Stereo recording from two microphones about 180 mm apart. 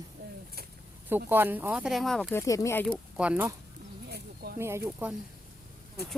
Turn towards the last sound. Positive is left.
turn(degrees=-10)  # may be behind; listen again after turning